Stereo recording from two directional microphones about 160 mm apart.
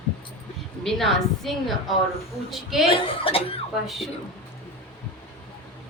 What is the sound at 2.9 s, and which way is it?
Speech, 35° left (ahead or behind).